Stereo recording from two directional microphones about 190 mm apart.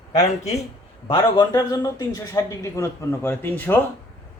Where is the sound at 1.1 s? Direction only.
20° left (ahead or behind).